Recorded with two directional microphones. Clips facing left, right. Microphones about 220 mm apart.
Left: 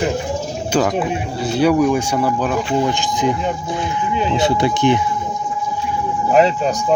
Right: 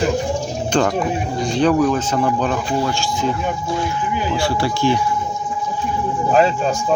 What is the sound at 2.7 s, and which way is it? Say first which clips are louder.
Speech: left 2 dB; 20° left (ahead or behind).